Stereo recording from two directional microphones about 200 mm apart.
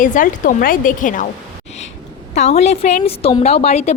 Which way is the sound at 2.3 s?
35° left (ahead or behind).